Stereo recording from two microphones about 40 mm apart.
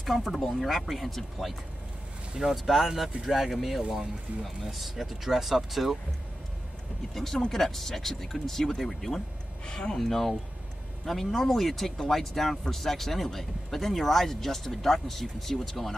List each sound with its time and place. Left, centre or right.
0.0 s speech: centre
7.2 s speech: centre
9.9 s speech: centre